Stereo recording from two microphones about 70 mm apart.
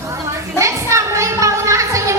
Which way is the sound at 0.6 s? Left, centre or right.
Right.